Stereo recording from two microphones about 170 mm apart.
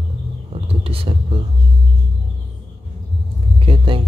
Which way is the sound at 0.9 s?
35° right (ahead or behind).